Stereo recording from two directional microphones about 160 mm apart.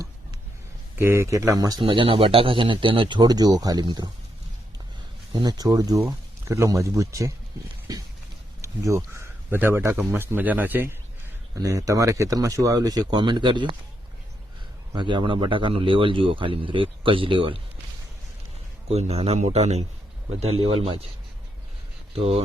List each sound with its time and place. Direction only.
0.9 s speech: 15° right (ahead or behind)
1.8 s speech: 35° right (ahead or behind)
5.3 s speech: 25° right (ahead or behind)
14.9 s speech: 30° right (ahead or behind)
18.9 s speech: 40° right (ahead or behind)
22.1 s speech: 35° right (ahead or behind)